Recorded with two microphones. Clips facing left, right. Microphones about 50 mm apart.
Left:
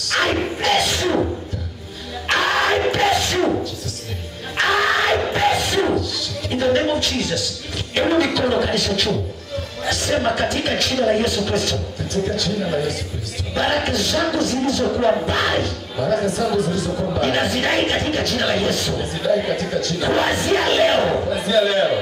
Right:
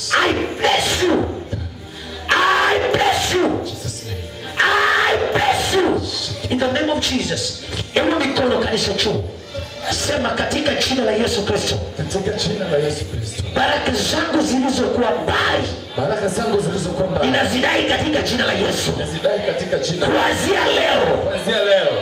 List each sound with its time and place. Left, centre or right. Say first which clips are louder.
0.1 s music: right 3 dB; right
2.2 s music: right 3 dB; centre
4.6 s music: right 2 dB; centre
8.0 s speech: even; centre